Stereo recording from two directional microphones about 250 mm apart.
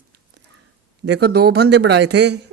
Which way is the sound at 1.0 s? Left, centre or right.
Right.